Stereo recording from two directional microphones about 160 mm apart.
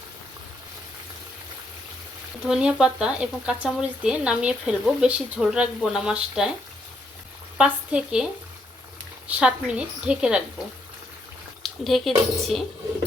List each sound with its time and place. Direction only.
2.4 s speech: 5° right (ahead or behind)
7.6 s a woman's voice: 5° right (ahead or behind)
11.6 s speech: centre (ahead or behind)